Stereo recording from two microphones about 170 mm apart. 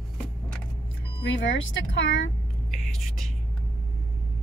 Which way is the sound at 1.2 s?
90° left.